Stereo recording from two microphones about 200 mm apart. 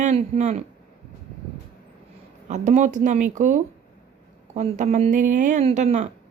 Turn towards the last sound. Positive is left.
turn(degrees=-35)  # may be behind; listen again after turning